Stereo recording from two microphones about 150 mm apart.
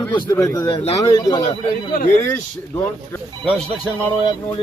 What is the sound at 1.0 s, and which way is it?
Speech, 25° left (ahead or behind).